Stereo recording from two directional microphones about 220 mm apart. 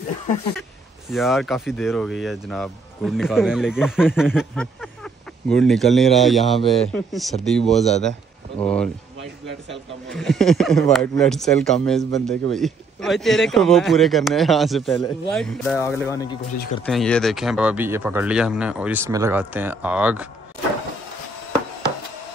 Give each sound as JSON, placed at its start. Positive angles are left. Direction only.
{"t": 1.1, "sound": "speech", "side_deg": 0}
{"t": 7.7, "sound": "speech", "side_deg": 30}
{"t": 8.5, "sound": "speech", "side_deg": 5}
{"t": 10.0, "sound": "speech", "side_deg": 0}
{"t": 16.0, "sound": "speech", "side_deg": 15}
{"t": 16.8, "sound": "speech", "side_deg": 5}